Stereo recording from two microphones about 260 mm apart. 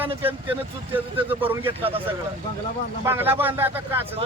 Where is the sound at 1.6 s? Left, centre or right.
Right.